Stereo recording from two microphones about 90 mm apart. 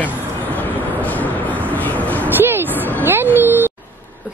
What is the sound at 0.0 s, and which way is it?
Vehicle, 20° left (ahead or behind).